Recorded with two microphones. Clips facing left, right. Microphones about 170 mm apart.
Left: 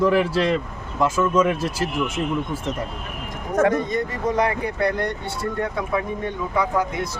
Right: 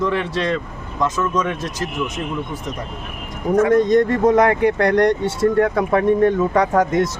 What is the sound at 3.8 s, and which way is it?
Speech, 90° right.